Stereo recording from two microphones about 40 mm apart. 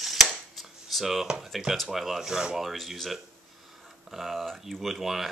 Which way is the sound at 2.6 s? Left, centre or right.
Centre.